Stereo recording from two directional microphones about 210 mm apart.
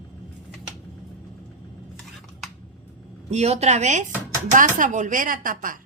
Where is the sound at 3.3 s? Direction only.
30° right (ahead or behind).